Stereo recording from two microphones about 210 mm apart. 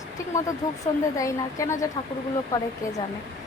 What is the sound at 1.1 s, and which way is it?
A child's voice, 15° left (ahead or behind).